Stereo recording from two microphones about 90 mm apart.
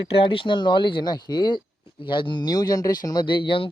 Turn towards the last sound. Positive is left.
turn(degrees=70)  # may be behind; listen again after turning